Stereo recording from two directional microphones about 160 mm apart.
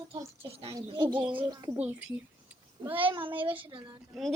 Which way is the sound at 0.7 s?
25° right (ahead or behind).